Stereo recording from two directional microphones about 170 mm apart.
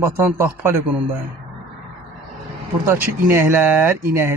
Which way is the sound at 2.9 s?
10° right (ahead or behind).